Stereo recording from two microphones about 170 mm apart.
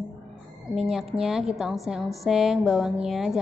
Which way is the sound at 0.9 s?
Centre (ahead or behind).